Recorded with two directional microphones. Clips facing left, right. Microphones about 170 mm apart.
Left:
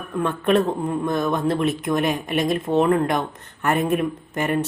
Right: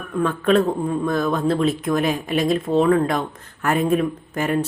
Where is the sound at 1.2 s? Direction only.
20° left (ahead or behind).